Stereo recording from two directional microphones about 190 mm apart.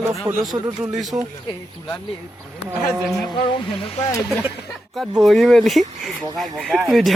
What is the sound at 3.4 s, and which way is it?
Speech, 25° left (ahead or behind).